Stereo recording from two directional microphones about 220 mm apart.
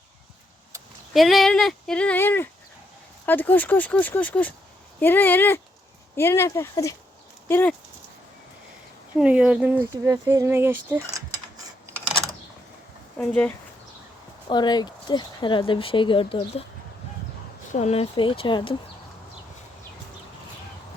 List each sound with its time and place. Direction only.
1.1 s speech: centre (ahead or behind)
9.1 s speech: 5° right (ahead or behind)
13.1 s speech: 5° left (ahead or behind)
14.5 s speech: 20° left (ahead or behind)
17.7 s speech: 30° left (ahead or behind)